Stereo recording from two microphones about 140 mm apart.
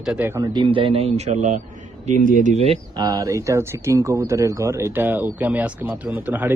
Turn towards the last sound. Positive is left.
turn(degrees=-15)  # may be behind; listen again after turning